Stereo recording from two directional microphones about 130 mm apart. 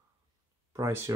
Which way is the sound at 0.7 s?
20° right (ahead or behind).